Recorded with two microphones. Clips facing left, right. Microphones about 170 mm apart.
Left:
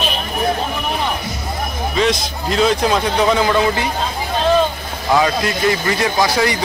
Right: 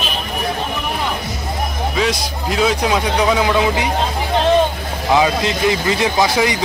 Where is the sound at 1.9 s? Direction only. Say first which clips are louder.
Left 3 dB; 5° right (ahead or behind).